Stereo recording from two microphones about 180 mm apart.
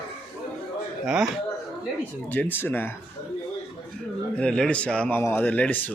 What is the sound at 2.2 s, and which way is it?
Speech, 10° left (ahead or behind).